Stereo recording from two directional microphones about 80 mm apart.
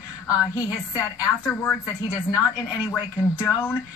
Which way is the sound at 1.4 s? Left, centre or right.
Left.